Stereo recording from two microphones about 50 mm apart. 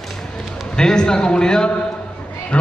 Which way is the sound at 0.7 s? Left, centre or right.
Centre.